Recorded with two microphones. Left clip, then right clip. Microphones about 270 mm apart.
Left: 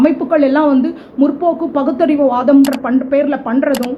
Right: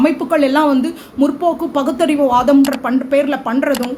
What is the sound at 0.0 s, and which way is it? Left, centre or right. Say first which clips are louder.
Speech: left 2 dB; centre.